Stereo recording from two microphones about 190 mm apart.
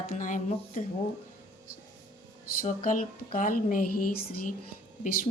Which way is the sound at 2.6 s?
45° left (ahead or behind).